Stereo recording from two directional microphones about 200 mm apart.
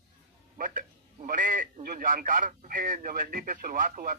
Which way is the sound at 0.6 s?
40° right (ahead or behind).